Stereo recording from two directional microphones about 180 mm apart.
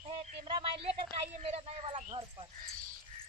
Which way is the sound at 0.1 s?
30° right (ahead or behind).